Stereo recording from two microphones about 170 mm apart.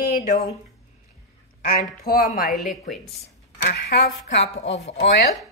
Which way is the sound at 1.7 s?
60° left (ahead or behind).